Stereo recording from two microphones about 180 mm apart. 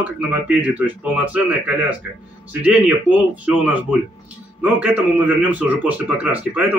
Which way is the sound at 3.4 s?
10° right (ahead or behind).